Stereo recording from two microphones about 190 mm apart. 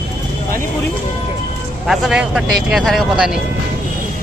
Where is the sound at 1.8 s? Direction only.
5° right (ahead or behind).